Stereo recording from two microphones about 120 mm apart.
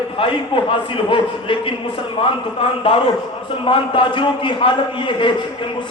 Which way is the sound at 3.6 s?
45° left (ahead or behind).